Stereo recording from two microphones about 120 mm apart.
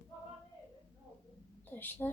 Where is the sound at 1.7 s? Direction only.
15° left (ahead or behind).